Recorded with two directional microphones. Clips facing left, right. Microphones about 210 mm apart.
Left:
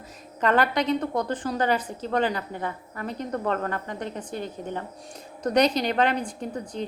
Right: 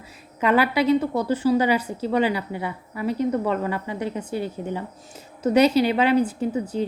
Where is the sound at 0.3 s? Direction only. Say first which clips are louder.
Right 3 dB; 10° right (ahead or behind).